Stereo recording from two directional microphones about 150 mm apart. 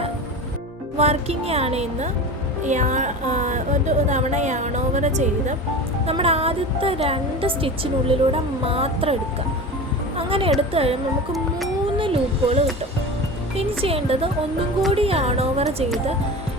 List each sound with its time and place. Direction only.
0.9 s a woman's voice: 45° right (ahead or behind)
6.1 s speech: 40° right (ahead or behind)
10.2 s a woman's voice: 35° right (ahead or behind)
11.9 s speech: 35° right (ahead or behind)